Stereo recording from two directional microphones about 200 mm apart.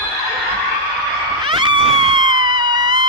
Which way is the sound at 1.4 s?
25° right (ahead or behind).